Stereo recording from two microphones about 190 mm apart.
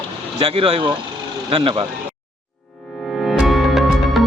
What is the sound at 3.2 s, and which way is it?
Music, centre (ahead or behind).